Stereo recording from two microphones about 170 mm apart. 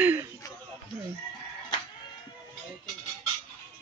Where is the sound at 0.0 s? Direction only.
10° right (ahead or behind).